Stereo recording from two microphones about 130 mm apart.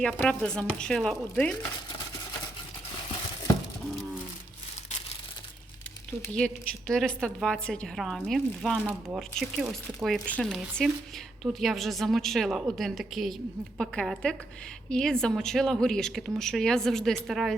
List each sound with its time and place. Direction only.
0.0 s speech: 10° left (ahead or behind)
6.3 s speech: 5° left (ahead or behind)
8.8 s speech: 15° right (ahead or behind)
9.4 s speech: 5° right (ahead or behind)
10.2 s speech: 10° left (ahead or behind)